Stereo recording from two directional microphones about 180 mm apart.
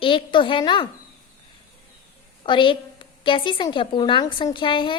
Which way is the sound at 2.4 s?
30° left (ahead or behind).